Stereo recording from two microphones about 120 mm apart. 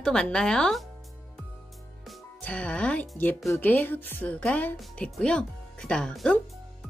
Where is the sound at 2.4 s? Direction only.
10° left (ahead or behind).